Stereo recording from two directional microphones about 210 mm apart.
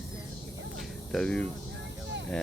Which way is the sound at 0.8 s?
5° left (ahead or behind).